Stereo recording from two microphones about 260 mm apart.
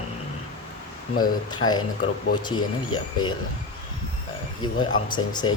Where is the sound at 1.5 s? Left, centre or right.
Centre.